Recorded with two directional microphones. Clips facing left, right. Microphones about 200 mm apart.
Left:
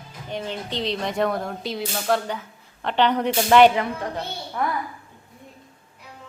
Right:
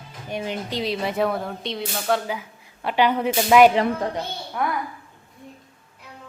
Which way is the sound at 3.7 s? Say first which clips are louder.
Right 4 dB; 35° right (ahead or behind).